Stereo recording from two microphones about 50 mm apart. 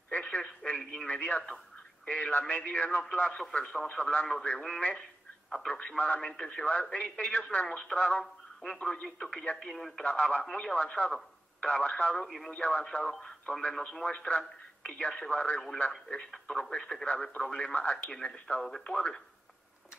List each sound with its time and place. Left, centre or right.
0.1 s telephone: left
0.4 s radio: centre
1.0 s a man's voice: left
8.8 s speech: centre
10.0 s a man's voice: left
12.2 s speech: centre
12.4 s a man's voice: left
18.9 s a man's voice: centre